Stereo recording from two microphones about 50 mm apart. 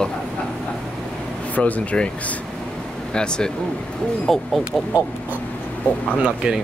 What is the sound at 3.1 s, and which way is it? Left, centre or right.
Speech, centre.